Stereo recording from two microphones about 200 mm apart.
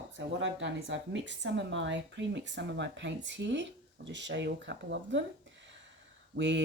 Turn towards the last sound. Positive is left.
turn(degrees=-60)  # may be behind; listen again after turning